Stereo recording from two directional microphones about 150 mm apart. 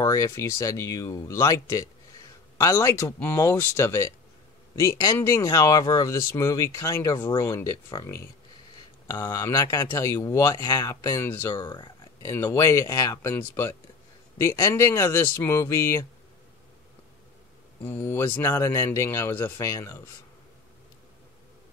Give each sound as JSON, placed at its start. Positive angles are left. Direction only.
{"t": 0.0, "sound": "speech", "side_deg": 20}
{"t": 11.6, "sound": "speech", "side_deg": 30}
{"t": 17.8, "sound": "speech", "side_deg": 15}